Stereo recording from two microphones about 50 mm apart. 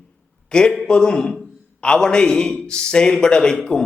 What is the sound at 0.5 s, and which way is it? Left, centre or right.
A man's voice, centre.